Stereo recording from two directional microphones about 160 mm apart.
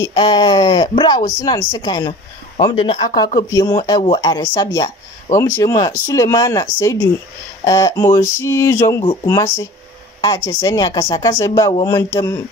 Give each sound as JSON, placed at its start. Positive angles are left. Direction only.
{"t": 0.0, "sound": "speech", "side_deg": 30}
{"t": 3.3, "sound": "speech", "side_deg": 25}